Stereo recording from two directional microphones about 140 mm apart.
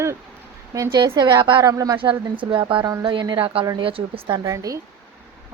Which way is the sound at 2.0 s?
40° right (ahead or behind).